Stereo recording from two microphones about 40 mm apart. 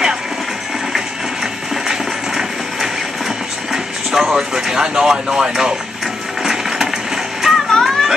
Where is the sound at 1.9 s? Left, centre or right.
Centre.